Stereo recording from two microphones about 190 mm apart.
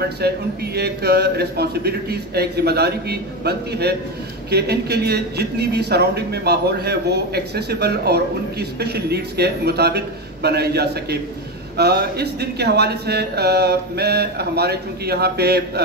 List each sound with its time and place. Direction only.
0.2 s a man's voice: 60° right (ahead or behind)